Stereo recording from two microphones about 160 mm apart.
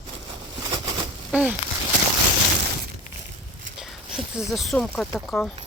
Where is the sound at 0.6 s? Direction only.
25° right (ahead or behind).